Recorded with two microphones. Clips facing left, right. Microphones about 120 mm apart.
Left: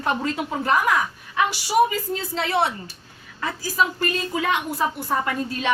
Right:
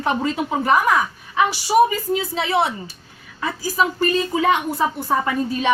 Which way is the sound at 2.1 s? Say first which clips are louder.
Right 4 dB; 5° right (ahead or behind).